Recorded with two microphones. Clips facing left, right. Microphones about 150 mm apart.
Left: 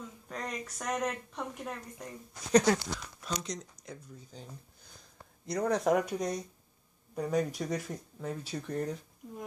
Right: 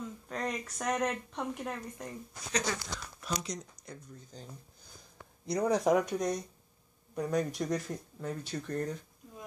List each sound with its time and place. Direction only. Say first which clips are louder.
0.3 s speech: right 2 dB; centre (ahead or behind)
2.5 s speech: left 10 dB; 55° left (ahead or behind)
3.2 s speech: right 3 dB; 5° right (ahead or behind)
5.5 s speech: right 1 dB; centre (ahead or behind)